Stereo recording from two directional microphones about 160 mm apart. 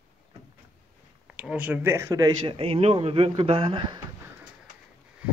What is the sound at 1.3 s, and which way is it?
Speech, 10° right (ahead or behind).